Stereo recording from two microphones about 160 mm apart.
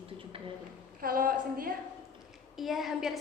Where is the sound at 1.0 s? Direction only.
65° right (ahead or behind).